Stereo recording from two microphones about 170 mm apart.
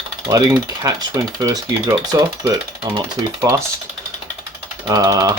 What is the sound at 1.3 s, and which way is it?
Speech, 20° right (ahead or behind).